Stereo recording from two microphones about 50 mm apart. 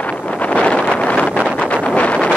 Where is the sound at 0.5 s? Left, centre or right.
Centre.